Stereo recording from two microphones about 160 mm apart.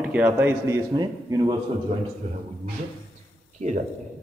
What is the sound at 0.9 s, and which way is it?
Speech, 25° right (ahead or behind).